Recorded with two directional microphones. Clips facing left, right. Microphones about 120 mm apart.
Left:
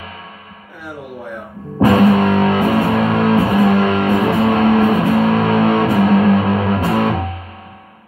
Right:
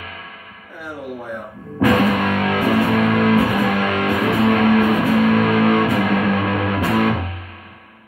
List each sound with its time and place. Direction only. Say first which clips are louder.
1.8 s music: left 5 dB; 35° left (ahead or behind)